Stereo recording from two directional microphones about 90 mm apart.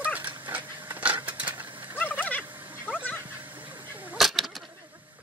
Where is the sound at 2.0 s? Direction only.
20° left (ahead or behind).